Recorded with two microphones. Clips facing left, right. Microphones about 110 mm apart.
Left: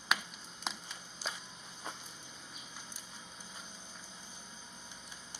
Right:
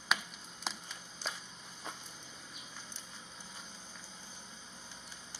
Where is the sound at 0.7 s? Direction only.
Centre (ahead or behind).